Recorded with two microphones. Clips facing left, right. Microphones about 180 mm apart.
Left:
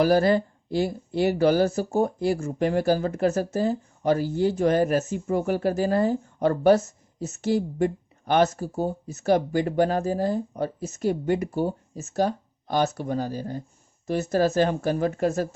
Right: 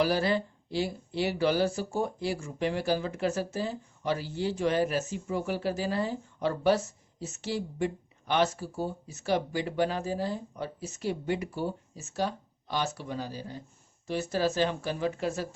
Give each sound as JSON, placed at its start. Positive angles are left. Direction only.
{"t": 0.0, "sound": "speech", "side_deg": 45}